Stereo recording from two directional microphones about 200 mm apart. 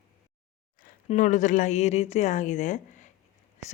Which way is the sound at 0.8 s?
40° left (ahead or behind).